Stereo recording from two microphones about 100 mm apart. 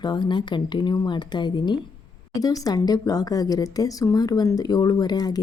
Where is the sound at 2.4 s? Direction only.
40° left (ahead or behind).